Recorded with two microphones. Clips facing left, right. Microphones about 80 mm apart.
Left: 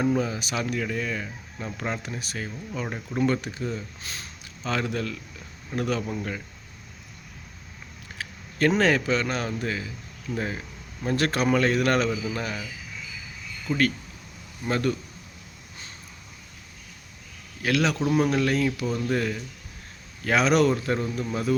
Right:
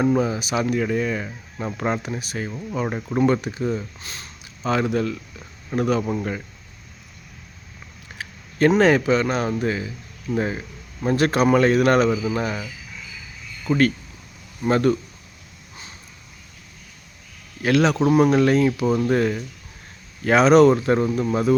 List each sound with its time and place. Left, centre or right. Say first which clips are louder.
0.0 s speech: right 5 dB; right
2.0 s speech: right 5 dB; centre
2.7 s speech: right 7 dB; right
3.2 s speech: right 5 dB; centre
4.0 s speech: right 1 dB; centre
4.6 s speech: right 7 dB; centre
8.2 s a sound: right 5 dB; right
8.8 s speech: right 6 dB; centre
13.7 s speech: right 5 dB; right
17.6 s speech: right 6 dB; right
18.9 s speech: right 7 dB; right